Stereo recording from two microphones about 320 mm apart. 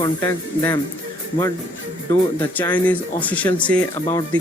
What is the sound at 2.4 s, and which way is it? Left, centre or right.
A man's voice, centre.